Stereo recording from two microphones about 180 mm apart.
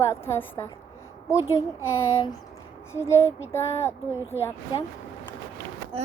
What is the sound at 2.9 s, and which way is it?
A woman's voice, 15° left (ahead or behind).